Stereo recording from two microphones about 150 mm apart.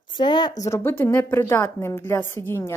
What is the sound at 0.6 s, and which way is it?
A woman's voice, 15° left (ahead or behind).